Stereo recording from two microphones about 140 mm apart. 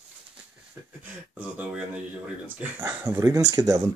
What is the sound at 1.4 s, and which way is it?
Speech, 10° right (ahead or behind).